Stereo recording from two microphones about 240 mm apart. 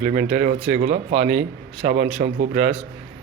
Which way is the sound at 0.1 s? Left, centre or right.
Right.